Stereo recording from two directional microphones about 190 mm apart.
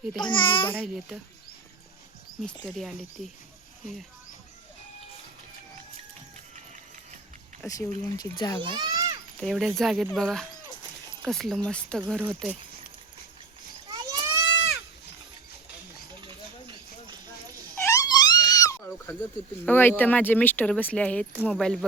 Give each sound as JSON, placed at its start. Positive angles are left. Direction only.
{"t": 0.2, "sound": "a child's voice", "side_deg": 25}
{"t": 0.9, "sound": "speech", "side_deg": 0}
{"t": 2.6, "sound": "speech", "side_deg": 0}
{"t": 7.6, "sound": "a child's voice", "side_deg": 15}
{"t": 8.7, "sound": "a sound", "side_deg": -20}
{"t": 9.4, "sound": "speech", "side_deg": 0}
{"t": 12.2, "sound": "speech", "side_deg": -5}
{"t": 13.8, "sound": "a sound", "side_deg": -20}
{"t": 16.2, "sound": "hiss", "side_deg": -25}
{"t": 17.7, "sound": "a sound", "side_deg": 15}
{"t": 19.6, "sound": "speech", "side_deg": 10}